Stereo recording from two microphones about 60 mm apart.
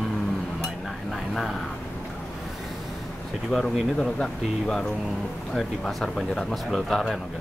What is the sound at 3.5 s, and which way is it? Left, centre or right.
Speech, centre.